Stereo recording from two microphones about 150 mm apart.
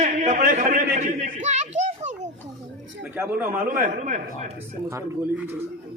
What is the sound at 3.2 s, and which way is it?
Speech, 15° right (ahead or behind).